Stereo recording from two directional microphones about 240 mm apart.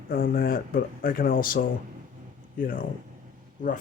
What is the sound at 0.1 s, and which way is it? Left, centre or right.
Speech, left.